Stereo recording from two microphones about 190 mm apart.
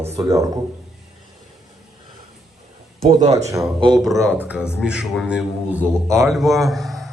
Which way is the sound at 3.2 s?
35° right (ahead or behind).